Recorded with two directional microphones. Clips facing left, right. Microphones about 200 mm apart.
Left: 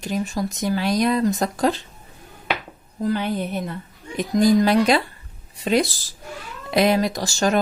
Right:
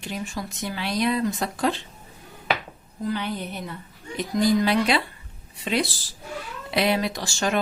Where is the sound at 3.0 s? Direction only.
50° left (ahead or behind).